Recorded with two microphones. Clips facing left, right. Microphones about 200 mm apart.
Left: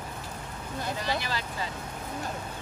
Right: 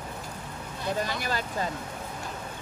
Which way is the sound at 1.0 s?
45° right (ahead or behind).